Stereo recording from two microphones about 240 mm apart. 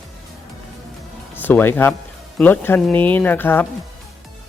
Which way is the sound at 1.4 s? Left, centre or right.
Centre.